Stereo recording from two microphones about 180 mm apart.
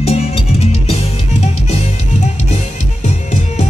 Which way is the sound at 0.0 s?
35° left (ahead or behind).